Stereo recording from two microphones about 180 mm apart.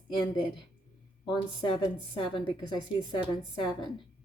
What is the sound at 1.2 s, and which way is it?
A woman's voice, 30° left (ahead or behind).